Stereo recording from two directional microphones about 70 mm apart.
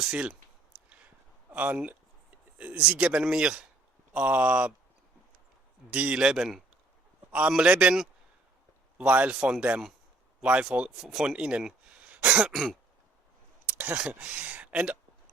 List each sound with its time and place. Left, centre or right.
0.0 s speech: centre
1.5 s speech: right
5.9 s speech: centre
9.0 s speech: centre
11.0 s speech: centre
13.7 s speech: right